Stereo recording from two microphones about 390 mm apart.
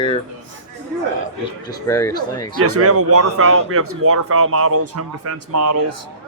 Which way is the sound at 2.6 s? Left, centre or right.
Right.